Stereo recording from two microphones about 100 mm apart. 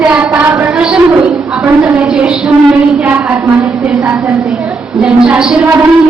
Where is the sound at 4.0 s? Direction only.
15° right (ahead or behind).